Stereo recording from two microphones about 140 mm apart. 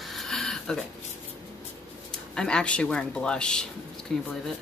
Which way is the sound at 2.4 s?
5° left (ahead or behind).